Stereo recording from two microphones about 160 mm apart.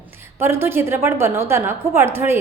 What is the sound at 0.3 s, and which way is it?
A woman's voice, 15° right (ahead or behind).